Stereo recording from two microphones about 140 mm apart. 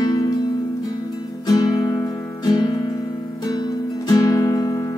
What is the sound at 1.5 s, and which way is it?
Music, 25° left (ahead or behind).